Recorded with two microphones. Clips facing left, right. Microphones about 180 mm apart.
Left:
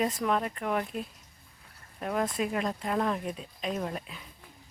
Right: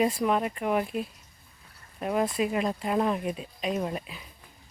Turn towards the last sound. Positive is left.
turn(degrees=-5)  # may be behind; listen again after turning